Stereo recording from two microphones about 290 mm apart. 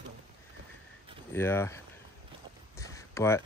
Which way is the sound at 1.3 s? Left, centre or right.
Centre.